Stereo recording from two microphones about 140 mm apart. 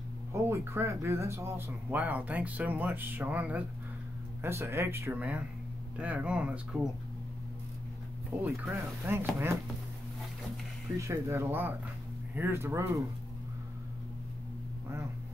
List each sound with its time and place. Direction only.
0.3 s speech: 20° right (ahead or behind)
8.4 s speech: 20° right (ahead or behind)
11.0 s speech: 20° right (ahead or behind)